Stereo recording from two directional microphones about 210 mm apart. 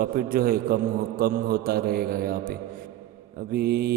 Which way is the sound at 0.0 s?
45° right (ahead or behind).